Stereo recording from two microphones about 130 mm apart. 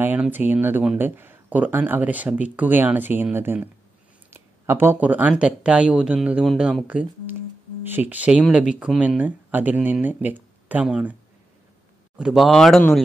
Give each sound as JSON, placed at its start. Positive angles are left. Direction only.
{"t": 0.0, "sound": "speech", "side_deg": -15}
{"t": 4.3, "sound": "a sound", "side_deg": -15}
{"t": 5.3, "sound": "speech", "side_deg": -5}
{"t": 12.2, "sound": "speech", "side_deg": -5}